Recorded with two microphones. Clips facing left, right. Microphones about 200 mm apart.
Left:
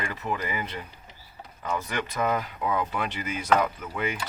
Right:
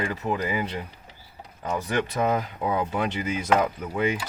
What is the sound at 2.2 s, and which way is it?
Speech, 30° right (ahead or behind).